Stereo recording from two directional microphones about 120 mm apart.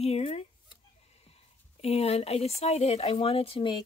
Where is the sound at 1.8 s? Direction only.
60° left (ahead or behind).